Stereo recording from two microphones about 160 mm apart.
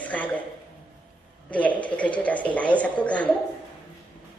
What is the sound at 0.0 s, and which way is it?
Speech, 10° left (ahead or behind).